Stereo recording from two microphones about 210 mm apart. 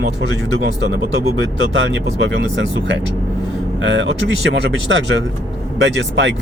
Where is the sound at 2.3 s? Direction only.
60° right (ahead or behind).